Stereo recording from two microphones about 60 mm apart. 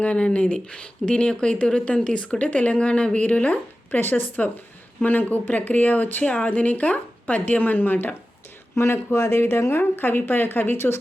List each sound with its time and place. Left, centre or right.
0.0 s speech: centre
8.7 s speech: left